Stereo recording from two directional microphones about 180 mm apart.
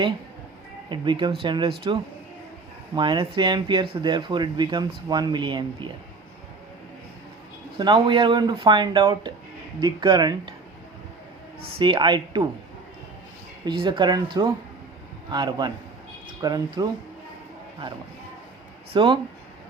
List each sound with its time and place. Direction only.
0.9 s speech: 25° right (ahead or behind)
2.9 s speech: 25° right (ahead or behind)
7.8 s speech: 25° right (ahead or behind)
11.8 s speech: 25° right (ahead or behind)
13.7 s speech: 25° right (ahead or behind)
18.9 s speech: 25° right (ahead or behind)